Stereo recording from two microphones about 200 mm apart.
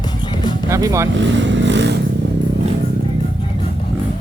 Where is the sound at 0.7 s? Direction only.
15° right (ahead or behind).